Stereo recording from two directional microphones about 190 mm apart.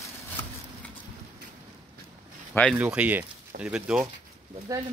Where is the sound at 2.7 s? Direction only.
5° right (ahead or behind).